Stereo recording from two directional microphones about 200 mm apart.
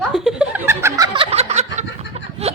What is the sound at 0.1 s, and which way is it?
Chuckle, 5° right (ahead or behind).